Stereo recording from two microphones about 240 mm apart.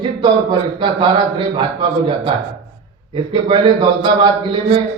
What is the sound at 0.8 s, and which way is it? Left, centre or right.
Speech, centre.